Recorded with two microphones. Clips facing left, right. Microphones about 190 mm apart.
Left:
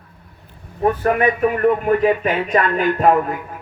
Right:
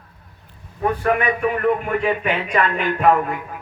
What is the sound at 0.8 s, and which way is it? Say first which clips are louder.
A man's voice: left 3 dB; 40° left (ahead or behind).